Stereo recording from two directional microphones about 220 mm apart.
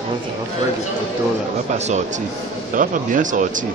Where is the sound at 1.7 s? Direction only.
30° right (ahead or behind).